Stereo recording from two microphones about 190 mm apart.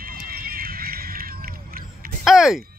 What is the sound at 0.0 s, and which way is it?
Horse, 50° right (ahead or behind).